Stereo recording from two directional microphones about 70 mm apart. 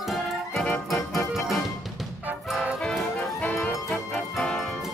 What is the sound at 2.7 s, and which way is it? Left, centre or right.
Music, centre.